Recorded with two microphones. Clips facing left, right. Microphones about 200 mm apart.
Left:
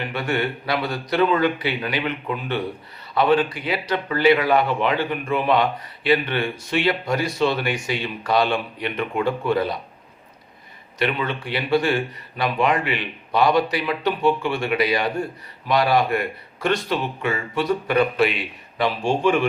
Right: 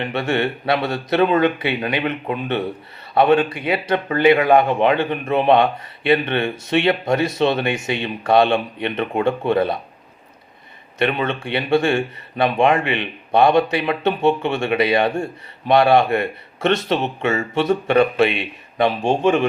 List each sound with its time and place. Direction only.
0.0 s speech: 25° right (ahead or behind)
4.4 s a man's voice: 50° right (ahead or behind)
4.7 s speech: 20° right (ahead or behind)
11.0 s speech: 25° right (ahead or behind)